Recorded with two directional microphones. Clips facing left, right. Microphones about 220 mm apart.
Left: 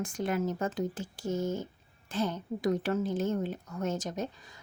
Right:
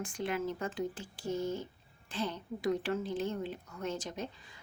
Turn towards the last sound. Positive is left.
turn(degrees=45)  # may be behind; listen again after turning